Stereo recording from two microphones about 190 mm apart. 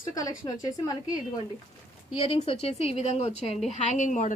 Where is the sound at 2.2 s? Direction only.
30° left (ahead or behind).